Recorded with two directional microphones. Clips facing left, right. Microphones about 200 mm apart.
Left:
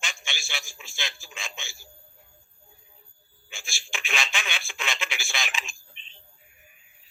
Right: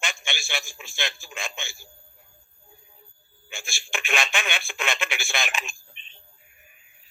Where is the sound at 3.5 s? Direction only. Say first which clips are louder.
Right 5 dB; 55° right (ahead or behind).